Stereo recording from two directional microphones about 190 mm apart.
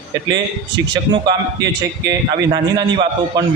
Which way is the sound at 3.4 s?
20° right (ahead or behind).